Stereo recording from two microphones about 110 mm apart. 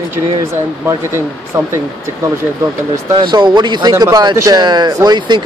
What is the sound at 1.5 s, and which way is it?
Speech, 25° right (ahead or behind).